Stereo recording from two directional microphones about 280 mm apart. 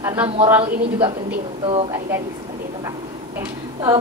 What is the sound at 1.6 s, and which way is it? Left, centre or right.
Speech, centre.